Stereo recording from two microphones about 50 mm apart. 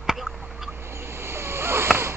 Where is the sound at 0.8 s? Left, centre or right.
Right.